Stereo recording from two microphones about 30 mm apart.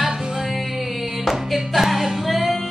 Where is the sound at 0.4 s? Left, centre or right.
Centre.